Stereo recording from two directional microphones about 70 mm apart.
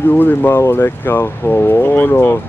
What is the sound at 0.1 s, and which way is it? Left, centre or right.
Speech, left.